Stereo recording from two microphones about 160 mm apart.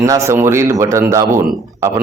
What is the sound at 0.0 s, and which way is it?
Speech, 20° right (ahead or behind).